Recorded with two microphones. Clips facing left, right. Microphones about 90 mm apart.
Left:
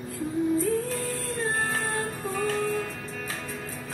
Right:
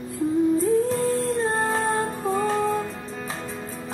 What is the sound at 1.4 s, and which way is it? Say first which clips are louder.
Music: right 5 dB; 25° right (ahead or behind).